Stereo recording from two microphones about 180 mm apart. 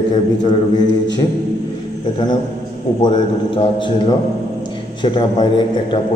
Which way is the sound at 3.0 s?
30° left (ahead or behind).